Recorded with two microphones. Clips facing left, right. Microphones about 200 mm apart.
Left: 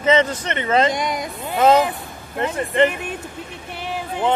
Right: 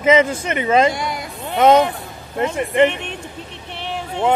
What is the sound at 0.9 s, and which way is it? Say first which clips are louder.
Speech: left 2 dB; 20° left (ahead or behind).